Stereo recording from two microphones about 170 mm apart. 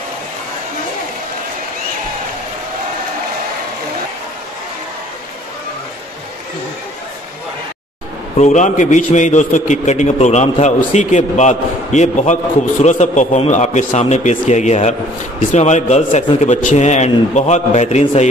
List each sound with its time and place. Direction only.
8.4 s a man's voice: 45° left (ahead or behind)